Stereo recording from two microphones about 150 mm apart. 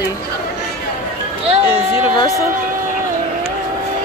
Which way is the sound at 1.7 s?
30° left (ahead or behind).